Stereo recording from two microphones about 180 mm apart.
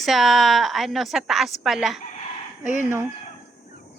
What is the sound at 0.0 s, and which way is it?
A woman's voice, centre (ahead or behind).